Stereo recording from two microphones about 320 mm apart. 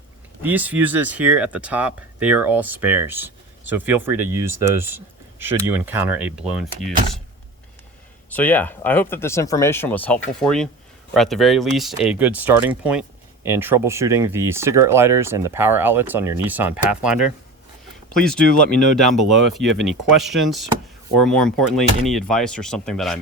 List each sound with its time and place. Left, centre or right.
0.4 s speech: centre
8.3 s speech: centre
19.2 s speech: right
19.5 s speech: centre
21.7 s speech: centre